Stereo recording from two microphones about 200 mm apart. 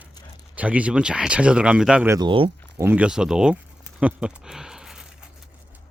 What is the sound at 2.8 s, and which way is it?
Speech, 10° right (ahead or behind).